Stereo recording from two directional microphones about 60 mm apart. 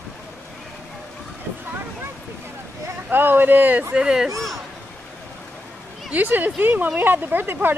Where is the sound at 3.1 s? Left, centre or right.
Right.